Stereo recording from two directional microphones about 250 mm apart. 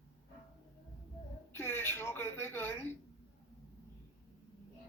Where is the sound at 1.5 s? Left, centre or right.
Centre.